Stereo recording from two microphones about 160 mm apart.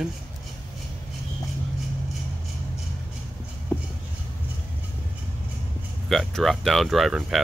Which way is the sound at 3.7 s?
10° left (ahead or behind).